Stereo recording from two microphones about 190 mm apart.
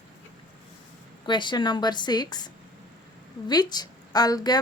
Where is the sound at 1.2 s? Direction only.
25° left (ahead or behind).